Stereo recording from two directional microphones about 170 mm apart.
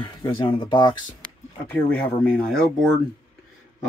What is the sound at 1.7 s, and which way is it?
Speech, 10° left (ahead or behind).